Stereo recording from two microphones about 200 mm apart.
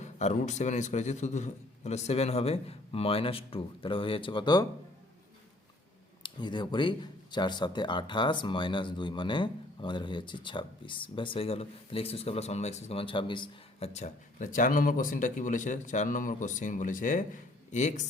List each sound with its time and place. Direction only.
0.0 s a man's voice: 35° left (ahead or behind)
6.2 s speech: 25° left (ahead or behind)